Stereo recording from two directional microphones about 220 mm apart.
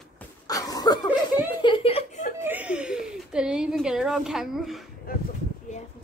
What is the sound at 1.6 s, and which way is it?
Chuckle, 25° left (ahead or behind).